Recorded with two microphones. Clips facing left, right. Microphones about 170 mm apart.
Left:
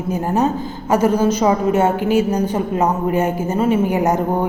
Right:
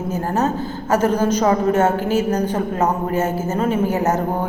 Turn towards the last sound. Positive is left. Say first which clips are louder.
# left 2 dB
turn(degrees=15)  # may be behind; listen again after turning